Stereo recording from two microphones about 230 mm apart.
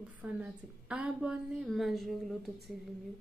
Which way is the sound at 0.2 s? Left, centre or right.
Centre.